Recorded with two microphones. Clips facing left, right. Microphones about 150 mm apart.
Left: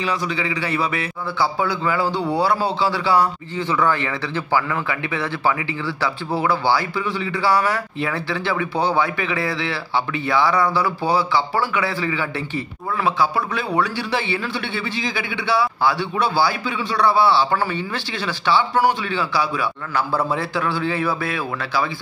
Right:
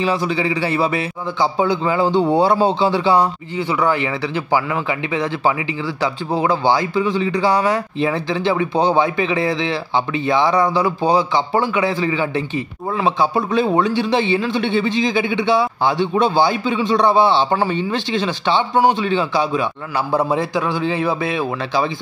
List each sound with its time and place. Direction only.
0.0 s a man's voice: 30° right (ahead or behind)